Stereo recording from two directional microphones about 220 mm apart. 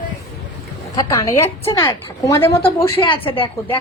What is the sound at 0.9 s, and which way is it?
A woman's voice, 15° left (ahead or behind).